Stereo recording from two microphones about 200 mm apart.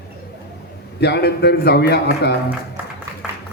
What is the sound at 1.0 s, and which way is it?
A man's voice, 55° left (ahead or behind).